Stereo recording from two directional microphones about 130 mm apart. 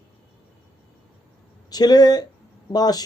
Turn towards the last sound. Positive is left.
turn(degrees=30)  # may be behind; listen again after turning